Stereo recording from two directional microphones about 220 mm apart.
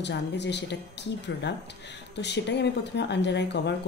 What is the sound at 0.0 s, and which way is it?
A woman's voice, 50° left (ahead or behind).